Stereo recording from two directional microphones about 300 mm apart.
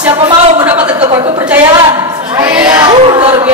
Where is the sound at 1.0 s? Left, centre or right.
Centre.